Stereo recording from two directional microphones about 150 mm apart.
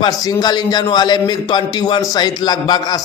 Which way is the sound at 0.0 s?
25° left (ahead or behind).